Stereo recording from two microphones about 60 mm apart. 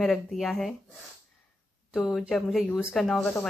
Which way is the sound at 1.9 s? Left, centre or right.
Centre.